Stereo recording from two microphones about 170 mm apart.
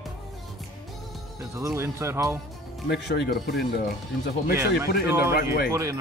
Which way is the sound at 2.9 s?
75° left (ahead or behind).